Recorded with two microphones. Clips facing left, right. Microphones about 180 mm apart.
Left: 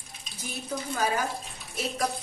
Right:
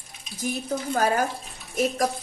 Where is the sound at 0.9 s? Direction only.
50° right (ahead or behind).